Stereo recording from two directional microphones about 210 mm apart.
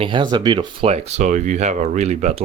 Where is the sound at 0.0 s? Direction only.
20° right (ahead or behind).